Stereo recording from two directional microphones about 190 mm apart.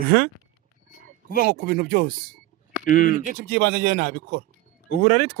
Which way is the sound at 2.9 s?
45° left (ahead or behind).